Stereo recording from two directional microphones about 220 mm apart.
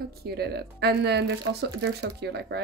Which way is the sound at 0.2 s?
45° right (ahead or behind).